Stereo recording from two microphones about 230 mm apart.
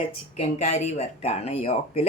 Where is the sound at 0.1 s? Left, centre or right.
Left.